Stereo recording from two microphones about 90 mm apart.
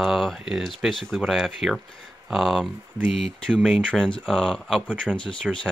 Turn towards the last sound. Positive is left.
turn(degrees=10)  # may be behind; listen again after turning